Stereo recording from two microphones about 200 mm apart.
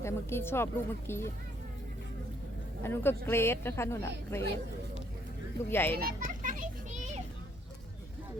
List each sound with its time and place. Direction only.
0.0 s speech: 10° left (ahead or behind)
2.8 s speech: 10° left (ahead or behind)
5.7 s speech: 10° left (ahead or behind)
6.0 s children playing: 45° right (ahead or behind)